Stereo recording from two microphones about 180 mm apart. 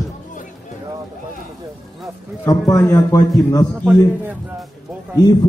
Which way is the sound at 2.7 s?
15° left (ahead or behind).